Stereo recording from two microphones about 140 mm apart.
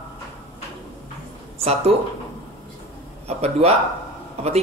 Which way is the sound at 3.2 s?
45° right (ahead or behind).